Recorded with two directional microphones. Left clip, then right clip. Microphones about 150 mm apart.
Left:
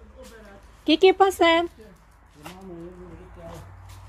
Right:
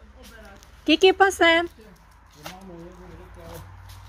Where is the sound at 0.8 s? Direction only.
5° right (ahead or behind).